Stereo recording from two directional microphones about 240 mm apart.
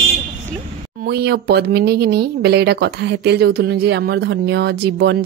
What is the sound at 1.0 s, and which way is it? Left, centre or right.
Speech, right.